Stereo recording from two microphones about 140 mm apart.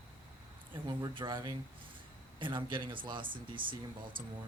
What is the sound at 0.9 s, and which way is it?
Speech, 30° right (ahead or behind).